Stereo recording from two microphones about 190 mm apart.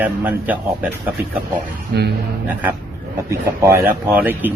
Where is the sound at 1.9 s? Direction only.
55° right (ahead or behind).